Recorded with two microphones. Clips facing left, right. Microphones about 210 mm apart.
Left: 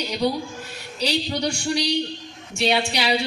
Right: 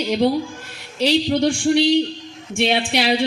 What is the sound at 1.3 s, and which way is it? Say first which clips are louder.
A man's voice: right 8 dB; 50° right (ahead or behind).